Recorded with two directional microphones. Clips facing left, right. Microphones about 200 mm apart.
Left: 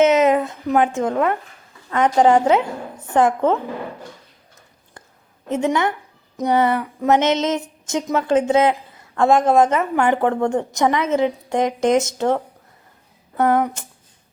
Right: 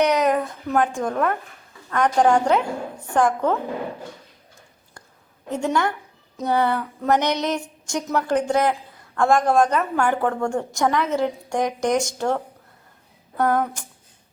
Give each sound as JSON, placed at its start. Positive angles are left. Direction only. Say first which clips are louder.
{"t": 0.0, "sound": "a woman's voice", "louder": "left 4 dB", "side_deg": 20}
{"t": 5.5, "sound": "a woman's voice", "louder": "left 3 dB", "side_deg": 20}
{"t": 6.3, "sound": "a sound", "louder": "left 3 dB", "side_deg": 20}
{"t": 7.1, "sound": "a woman's voice", "louder": "left 4 dB", "side_deg": 20}